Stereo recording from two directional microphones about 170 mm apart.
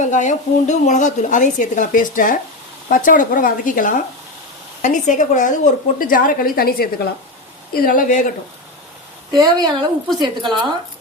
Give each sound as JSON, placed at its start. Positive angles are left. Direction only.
{"t": 0.0, "sound": "a woman's voice", "side_deg": 45}
{"t": 9.4, "sound": "a woman's voice", "side_deg": -25}